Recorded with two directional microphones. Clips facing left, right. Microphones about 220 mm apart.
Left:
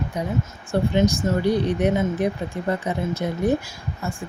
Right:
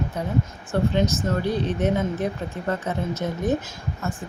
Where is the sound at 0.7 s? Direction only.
10° left (ahead or behind).